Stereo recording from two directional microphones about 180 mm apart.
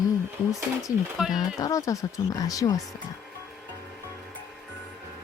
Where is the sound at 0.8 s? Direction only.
Centre (ahead or behind).